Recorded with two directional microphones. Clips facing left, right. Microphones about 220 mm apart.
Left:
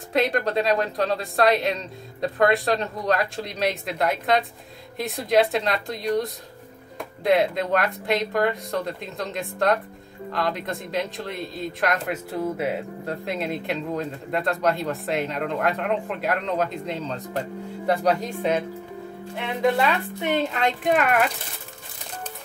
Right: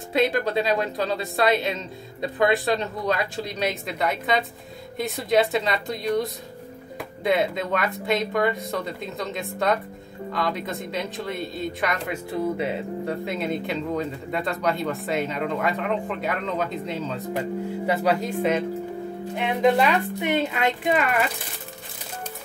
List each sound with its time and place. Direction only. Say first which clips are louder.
0.1 s speech: even; centre (ahead or behind)
19.3 s speech: right 2 dB; 20° right (ahead or behind)
20.9 s speech: left 4 dB; centre (ahead or behind)